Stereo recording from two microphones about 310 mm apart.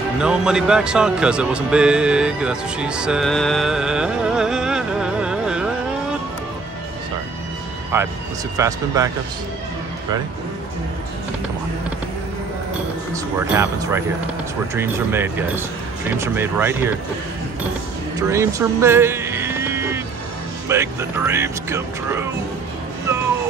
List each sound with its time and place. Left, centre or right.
0.2 s speech: centre
7.9 s speech: centre
13.1 s speech: centre
18.3 s a sound: centre
20.6 s speech: centre